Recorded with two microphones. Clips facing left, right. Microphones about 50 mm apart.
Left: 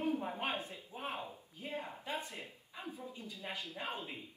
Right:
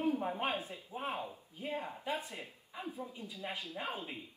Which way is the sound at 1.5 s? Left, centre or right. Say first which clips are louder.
Right 3 dB; right.